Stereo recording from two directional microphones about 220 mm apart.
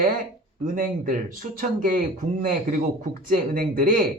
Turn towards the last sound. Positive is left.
turn(degrees=-40)  # may be behind; listen again after turning